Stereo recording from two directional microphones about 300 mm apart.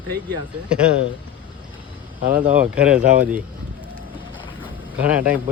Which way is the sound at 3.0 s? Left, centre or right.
Right.